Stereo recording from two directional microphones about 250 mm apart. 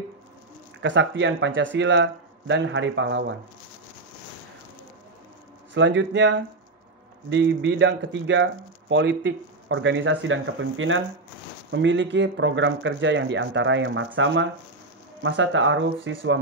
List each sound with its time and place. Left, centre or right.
0.8 s speech: right
5.8 s speech: right